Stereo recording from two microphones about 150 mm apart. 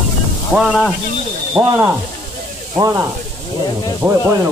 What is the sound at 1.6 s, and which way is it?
Speech, 20° right (ahead or behind).